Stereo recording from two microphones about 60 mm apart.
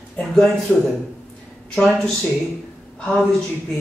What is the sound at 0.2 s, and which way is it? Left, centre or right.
Speech, centre.